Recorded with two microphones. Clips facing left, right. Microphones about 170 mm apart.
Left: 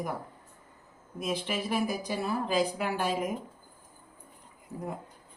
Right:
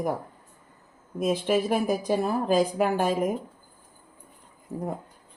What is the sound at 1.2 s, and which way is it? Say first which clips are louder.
Speech: right 8 dB; 45° right (ahead or behind).